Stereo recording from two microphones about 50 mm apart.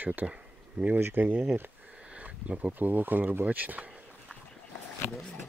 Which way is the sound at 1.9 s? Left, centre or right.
Right.